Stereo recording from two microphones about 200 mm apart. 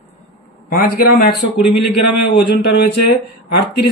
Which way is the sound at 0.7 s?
50° left (ahead or behind).